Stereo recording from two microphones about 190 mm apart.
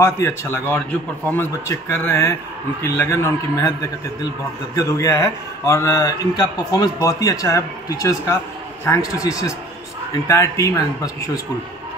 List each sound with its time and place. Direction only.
0.0 s speech: 15° left (ahead or behind)